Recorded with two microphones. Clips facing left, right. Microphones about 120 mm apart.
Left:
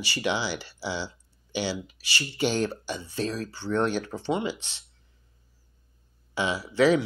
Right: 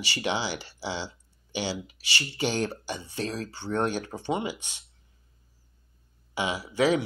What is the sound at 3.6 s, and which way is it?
Speech, 50° right (ahead or behind).